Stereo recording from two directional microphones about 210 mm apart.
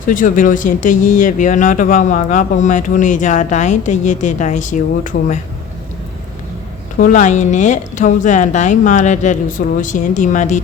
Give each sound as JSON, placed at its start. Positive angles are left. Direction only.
{"t": 0.1, "sound": "speech", "side_deg": 40}
{"t": 7.0, "sound": "speech", "side_deg": 35}